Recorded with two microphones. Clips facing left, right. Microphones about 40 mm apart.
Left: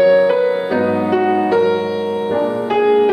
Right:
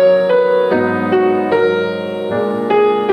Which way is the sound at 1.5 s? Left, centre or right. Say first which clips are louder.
Right 1 dB; right.